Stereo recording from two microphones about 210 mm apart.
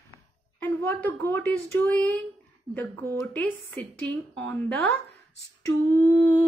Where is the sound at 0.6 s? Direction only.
10° left (ahead or behind).